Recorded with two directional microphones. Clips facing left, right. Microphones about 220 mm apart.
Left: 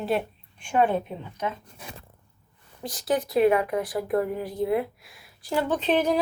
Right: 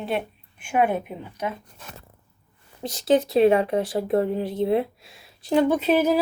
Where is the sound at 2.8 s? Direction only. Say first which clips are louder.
Right 6 dB; 25° right (ahead or behind).